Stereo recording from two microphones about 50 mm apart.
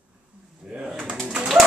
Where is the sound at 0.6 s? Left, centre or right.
Centre.